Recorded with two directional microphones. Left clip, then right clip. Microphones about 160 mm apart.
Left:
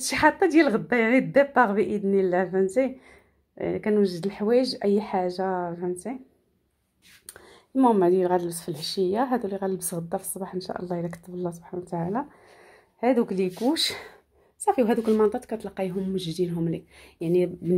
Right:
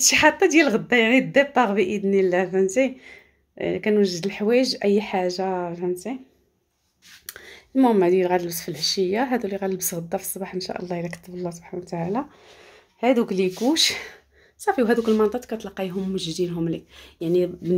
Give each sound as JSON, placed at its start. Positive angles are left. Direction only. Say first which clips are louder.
{"t": 0.0, "sound": "speech", "louder": "right 4 dB", "side_deg": -5}
{"t": 7.2, "sound": "speech", "louder": "right 8 dB", "side_deg": -10}